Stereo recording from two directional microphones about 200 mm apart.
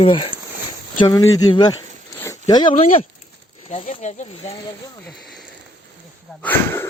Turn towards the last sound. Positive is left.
turn(degrees=10)  # may be behind; listen again after turning